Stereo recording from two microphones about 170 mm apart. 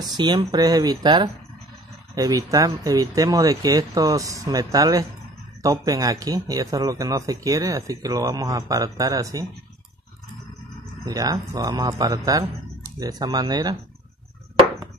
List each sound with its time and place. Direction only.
0.0 s speech: 25° right (ahead or behind)
11.1 s speech: 20° right (ahead or behind)